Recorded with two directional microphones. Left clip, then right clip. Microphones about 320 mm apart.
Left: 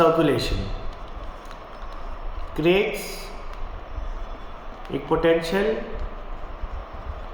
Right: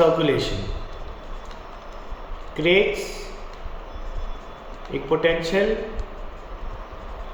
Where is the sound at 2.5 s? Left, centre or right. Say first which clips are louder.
Right 1 dB; centre.